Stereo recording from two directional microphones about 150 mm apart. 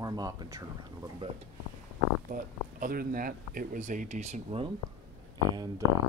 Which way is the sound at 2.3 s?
70° right (ahead or behind).